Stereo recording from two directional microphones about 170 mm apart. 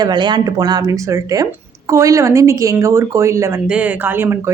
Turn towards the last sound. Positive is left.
turn(degrees=-15)  # may be behind; listen again after turning